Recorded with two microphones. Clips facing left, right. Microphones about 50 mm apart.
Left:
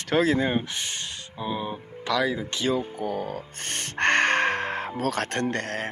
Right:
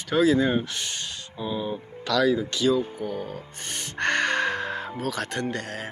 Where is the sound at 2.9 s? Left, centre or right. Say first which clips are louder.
Left 2 dB; left.